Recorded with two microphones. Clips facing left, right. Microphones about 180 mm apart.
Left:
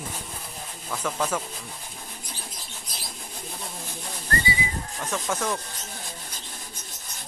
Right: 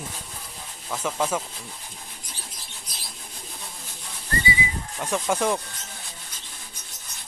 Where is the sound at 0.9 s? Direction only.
10° right (ahead or behind).